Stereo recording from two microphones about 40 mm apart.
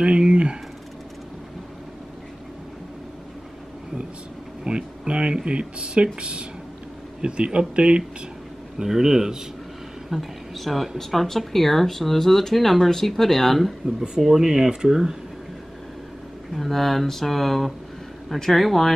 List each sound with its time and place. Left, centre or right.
0.2 s speech: right
4.6 s speech: right
7.2 s speech: right
8.7 s speech: centre
10.0 s speech: centre
13.8 s speech: centre
16.5 s speech: centre